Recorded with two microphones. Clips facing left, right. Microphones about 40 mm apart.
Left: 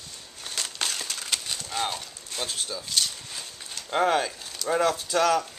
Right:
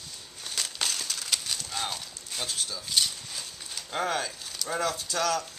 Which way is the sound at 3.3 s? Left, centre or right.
Centre.